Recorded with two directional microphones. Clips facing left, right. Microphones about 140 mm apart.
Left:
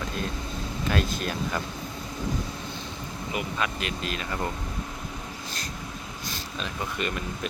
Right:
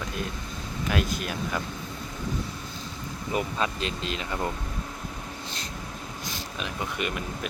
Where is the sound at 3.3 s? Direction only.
30° right (ahead or behind).